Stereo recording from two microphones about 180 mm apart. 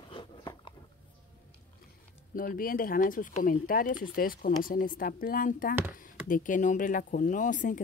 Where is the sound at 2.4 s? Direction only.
50° left (ahead or behind).